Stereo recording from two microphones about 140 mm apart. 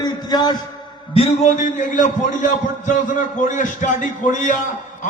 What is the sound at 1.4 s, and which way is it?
A man's voice, 65° left (ahead or behind).